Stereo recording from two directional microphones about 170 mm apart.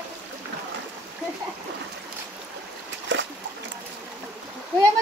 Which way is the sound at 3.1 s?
90° right.